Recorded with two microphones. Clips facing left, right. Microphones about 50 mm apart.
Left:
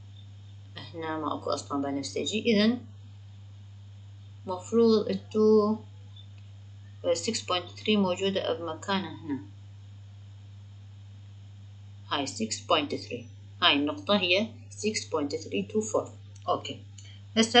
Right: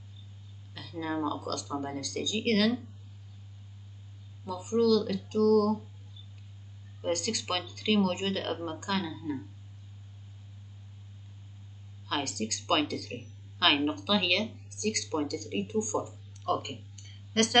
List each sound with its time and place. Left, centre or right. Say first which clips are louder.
0.7 s speech: right 1 dB; centre
4.5 s speech: left 3 dB; centre
7.0 s speech: left 3 dB; centre
12.1 s speech: left 2 dB; centre